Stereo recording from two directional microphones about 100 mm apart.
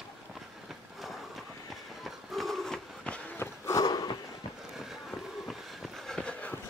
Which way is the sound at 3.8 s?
40° left (ahead or behind).